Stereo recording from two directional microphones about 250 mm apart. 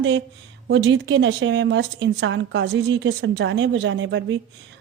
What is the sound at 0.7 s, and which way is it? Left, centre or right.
A woman's voice, right.